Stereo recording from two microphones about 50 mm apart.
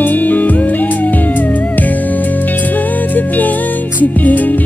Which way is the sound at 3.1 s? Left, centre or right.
Left.